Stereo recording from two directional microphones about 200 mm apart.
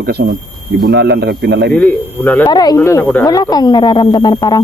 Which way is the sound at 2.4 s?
20° left (ahead or behind).